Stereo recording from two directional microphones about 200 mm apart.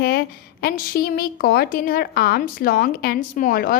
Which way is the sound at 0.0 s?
50° left (ahead or behind).